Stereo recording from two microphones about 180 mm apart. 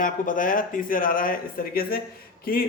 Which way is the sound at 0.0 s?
50° left (ahead or behind).